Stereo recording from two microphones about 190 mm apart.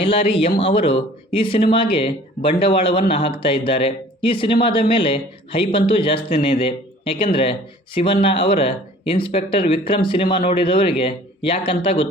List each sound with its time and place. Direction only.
0.0 s speech: 30° left (ahead or behind)